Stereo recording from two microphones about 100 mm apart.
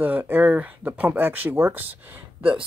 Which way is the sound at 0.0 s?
20° right (ahead or behind).